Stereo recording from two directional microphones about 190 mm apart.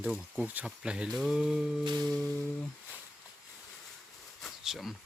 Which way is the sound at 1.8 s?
20° right (ahead or behind).